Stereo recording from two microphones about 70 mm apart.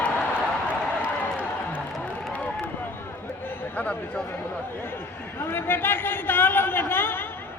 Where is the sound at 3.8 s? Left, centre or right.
Left.